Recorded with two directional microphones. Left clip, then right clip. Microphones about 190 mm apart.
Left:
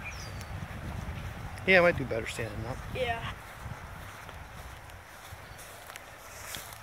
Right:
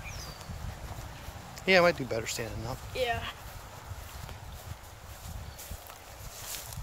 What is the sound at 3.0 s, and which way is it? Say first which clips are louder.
Speech: right 1 dB; 45° right (ahead or behind).